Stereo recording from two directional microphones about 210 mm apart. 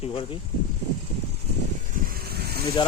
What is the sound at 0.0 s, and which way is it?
Speech, 25° left (ahead or behind).